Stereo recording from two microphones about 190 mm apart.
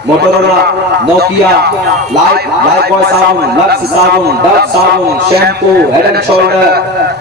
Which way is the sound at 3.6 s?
60° right (ahead or behind).